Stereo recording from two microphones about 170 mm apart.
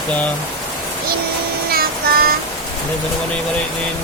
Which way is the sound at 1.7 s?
60° right (ahead or behind).